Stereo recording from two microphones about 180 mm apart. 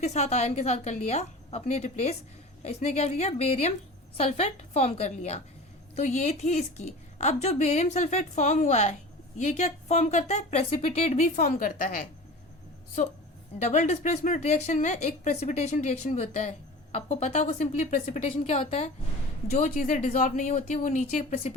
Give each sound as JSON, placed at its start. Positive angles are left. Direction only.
{"t": 0.0, "sound": "speech", "side_deg": 40}
{"t": 13.6, "sound": "speech", "side_deg": 40}
{"t": 19.5, "sound": "speech", "side_deg": 45}